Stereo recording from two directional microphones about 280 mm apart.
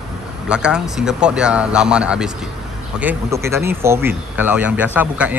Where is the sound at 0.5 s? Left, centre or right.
Centre.